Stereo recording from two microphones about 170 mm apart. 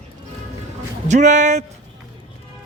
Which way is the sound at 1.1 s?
45° right (ahead or behind).